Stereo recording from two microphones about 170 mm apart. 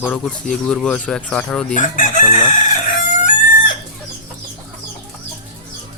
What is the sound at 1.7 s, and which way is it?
Chicken, 50° left (ahead or behind).